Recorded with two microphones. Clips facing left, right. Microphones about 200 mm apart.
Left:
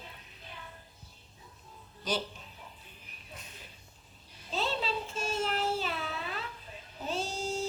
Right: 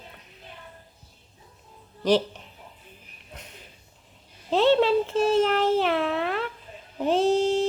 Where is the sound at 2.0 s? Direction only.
70° right (ahead or behind).